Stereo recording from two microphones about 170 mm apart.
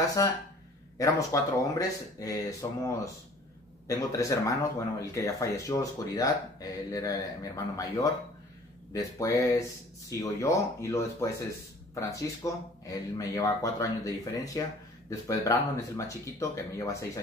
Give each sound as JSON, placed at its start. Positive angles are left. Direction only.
{"t": 0.2, "sound": "speech", "side_deg": 20}